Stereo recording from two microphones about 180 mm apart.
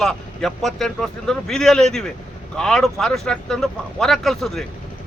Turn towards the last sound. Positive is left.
turn(degrees=0)  # may be behind; listen again after turning